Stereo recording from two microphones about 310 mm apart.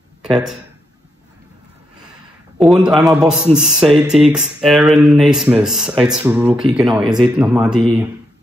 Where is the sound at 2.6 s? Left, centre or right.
Centre.